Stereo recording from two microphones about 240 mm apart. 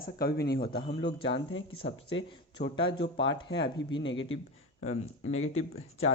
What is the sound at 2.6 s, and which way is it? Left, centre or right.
Speech, left.